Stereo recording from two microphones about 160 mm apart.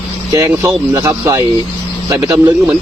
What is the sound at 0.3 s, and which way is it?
A man's voice, 20° right (ahead or behind).